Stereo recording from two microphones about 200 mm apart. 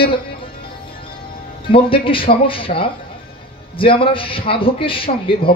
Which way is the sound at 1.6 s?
25° left (ahead or behind).